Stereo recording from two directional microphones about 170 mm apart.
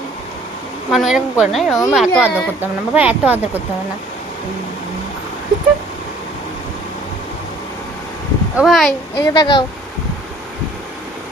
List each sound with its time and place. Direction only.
0.9 s a woman's voice: centre (ahead or behind)
8.5 s a woman's voice: centre (ahead or behind)
9.1 s a woman's voice: 25° left (ahead or behind)